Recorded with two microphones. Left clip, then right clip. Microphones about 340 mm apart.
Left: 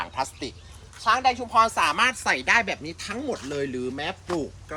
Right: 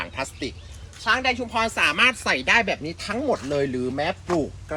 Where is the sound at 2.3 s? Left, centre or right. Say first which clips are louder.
Right 2 dB; centre.